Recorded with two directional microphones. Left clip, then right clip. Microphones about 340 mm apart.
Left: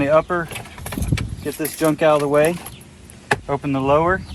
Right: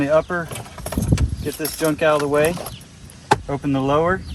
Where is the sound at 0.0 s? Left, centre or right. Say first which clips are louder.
Left 2 dB; centre.